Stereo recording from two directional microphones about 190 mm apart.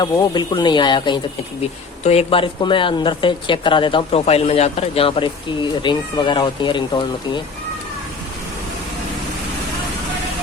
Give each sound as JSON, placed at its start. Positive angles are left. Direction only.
{"t": 0.0, "sound": "speech", "side_deg": 20}